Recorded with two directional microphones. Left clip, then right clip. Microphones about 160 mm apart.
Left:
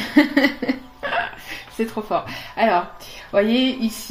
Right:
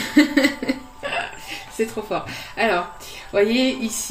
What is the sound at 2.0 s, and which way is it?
Speech, 50° left (ahead or behind).